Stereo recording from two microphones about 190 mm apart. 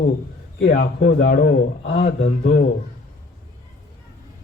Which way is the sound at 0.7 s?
50° left (ahead or behind).